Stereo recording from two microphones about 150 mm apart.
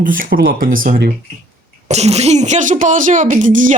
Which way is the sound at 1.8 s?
45° right (ahead or behind).